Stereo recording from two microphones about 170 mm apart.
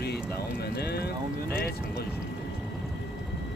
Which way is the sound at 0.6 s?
70° left (ahead or behind).